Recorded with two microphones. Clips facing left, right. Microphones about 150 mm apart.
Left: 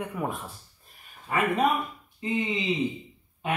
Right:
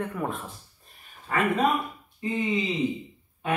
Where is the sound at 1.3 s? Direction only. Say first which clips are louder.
Even; 15° left (ahead or behind).